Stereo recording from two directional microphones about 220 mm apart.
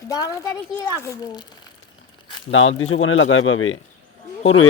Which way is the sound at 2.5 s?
65° left (ahead or behind).